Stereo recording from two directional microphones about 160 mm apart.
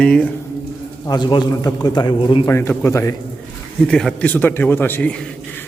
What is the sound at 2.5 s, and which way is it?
Speech, 15° left (ahead or behind).